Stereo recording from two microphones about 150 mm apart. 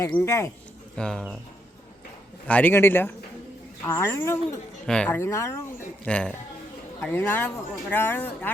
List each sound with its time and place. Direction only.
0.0 s speech: 15° left (ahead or behind)
0.9 s speech: 5° left (ahead or behind)
2.5 s speech: 10° left (ahead or behind)
4.9 s speech: 10° left (ahead or behind)
6.1 s speech: 10° left (ahead or behind)